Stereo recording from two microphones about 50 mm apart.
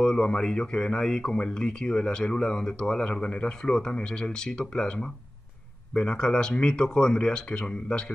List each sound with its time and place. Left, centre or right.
0.0 s speech: centre
5.9 s speech: centre